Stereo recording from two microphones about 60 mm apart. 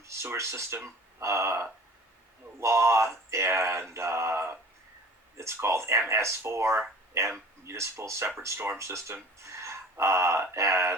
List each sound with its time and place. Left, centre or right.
0.0 s speech: right
8.5 s speech: right
8.8 s speech: right
9.4 s a sound: right
10.5 s speech: right